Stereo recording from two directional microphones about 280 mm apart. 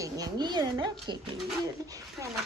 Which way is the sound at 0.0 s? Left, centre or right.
Centre.